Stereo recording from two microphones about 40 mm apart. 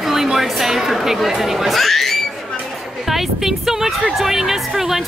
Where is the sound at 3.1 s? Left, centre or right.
Centre.